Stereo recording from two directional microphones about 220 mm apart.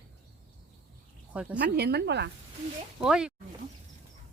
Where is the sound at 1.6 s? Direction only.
50° right (ahead or behind).